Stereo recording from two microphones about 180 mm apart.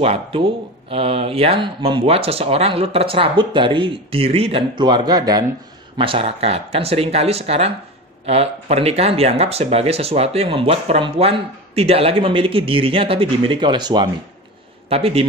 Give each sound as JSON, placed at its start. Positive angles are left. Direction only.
{"t": 0.0, "sound": "speech", "side_deg": -30}